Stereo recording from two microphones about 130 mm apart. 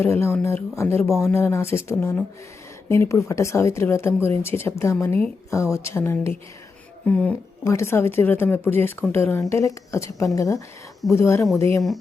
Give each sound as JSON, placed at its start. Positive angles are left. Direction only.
{"t": 0.0, "sound": "a woman's voice", "side_deg": 20}
{"t": 7.6, "sound": "a woman's voice", "side_deg": 20}